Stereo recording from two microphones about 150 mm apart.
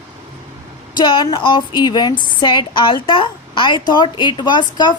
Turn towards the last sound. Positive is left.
turn(degrees=30)  # may be behind; listen again after turning